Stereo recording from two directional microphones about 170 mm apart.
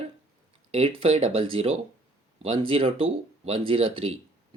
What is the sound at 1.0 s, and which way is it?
Speech, 35° right (ahead or behind).